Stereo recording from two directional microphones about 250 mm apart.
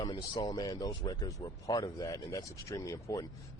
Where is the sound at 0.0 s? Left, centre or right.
Centre.